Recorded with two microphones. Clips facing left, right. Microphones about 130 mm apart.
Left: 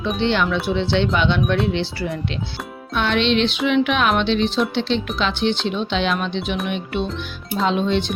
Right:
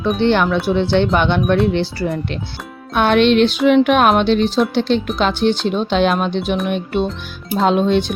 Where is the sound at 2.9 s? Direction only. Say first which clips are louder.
Right 6 dB; 50° right (ahead or behind).